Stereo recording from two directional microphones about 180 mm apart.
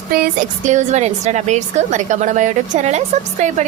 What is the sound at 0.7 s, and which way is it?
A woman's voice, 40° right (ahead or behind).